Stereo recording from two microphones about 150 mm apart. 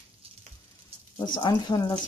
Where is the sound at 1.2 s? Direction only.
30° left (ahead or behind).